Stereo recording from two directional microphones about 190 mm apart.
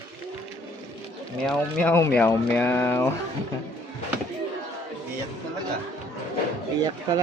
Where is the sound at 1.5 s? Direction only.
5° left (ahead or behind).